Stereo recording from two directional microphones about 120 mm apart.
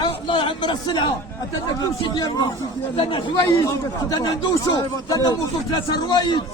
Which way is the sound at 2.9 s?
50° left (ahead or behind).